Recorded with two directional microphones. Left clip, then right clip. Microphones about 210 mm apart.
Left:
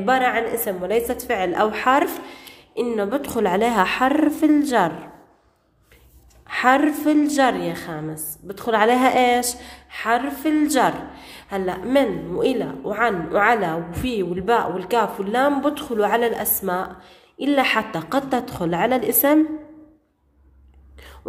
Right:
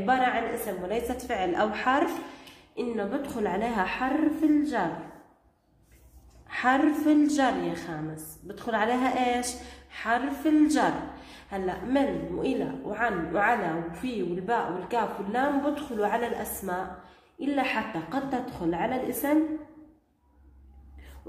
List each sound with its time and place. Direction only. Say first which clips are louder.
0.0 s a woman's voice: left 6 dB; 30° left (ahead or behind); by 4.8 s 45° left (ahead or behind)
6.4 s a woman's voice: left 7 dB; 40° left (ahead or behind)